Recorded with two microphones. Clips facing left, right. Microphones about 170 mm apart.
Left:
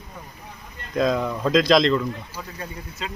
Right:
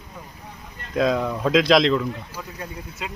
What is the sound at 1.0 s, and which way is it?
Speech, 5° right (ahead or behind).